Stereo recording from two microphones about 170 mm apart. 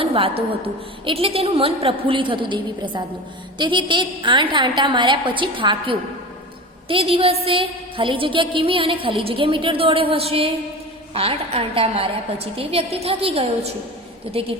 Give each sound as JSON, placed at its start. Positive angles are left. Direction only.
{"t": 0.0, "sound": "a woman's voice", "side_deg": -35}